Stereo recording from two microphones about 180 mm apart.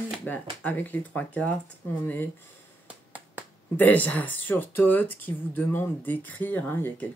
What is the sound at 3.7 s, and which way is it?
Speech, 10° left (ahead or behind).